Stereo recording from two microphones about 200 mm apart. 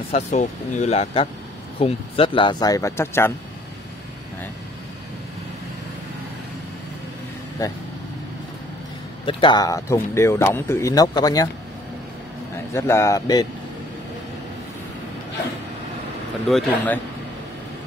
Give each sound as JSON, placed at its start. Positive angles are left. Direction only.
{"t": 0.1, "sound": "speech", "side_deg": 35}
{"t": 9.2, "sound": "speech", "side_deg": 25}
{"t": 12.7, "sound": "speech", "side_deg": 15}
{"t": 16.4, "sound": "a man's voice", "side_deg": 5}